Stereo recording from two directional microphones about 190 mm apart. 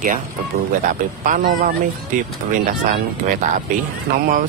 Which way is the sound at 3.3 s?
45° right (ahead or behind).